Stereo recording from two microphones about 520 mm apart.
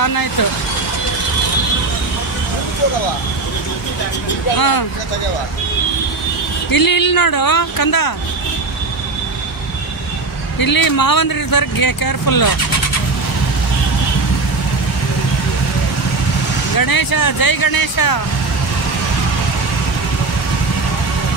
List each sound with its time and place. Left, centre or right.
0.0 s speech: left
4.6 s speech: left
6.7 s speech: left
10.6 s speech: left
16.7 s speech: left